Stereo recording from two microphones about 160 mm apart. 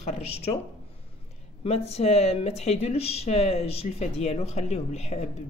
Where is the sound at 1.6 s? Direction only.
40° left (ahead or behind).